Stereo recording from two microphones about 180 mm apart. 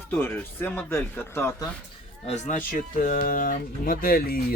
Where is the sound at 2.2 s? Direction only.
40° left (ahead or behind).